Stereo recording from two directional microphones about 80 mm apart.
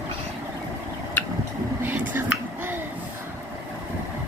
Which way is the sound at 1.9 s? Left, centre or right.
Right.